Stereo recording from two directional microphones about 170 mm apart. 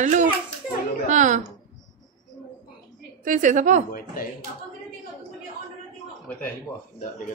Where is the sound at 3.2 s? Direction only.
50° right (ahead or behind).